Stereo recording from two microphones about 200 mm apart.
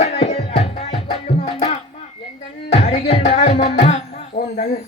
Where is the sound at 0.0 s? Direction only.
35° left (ahead or behind).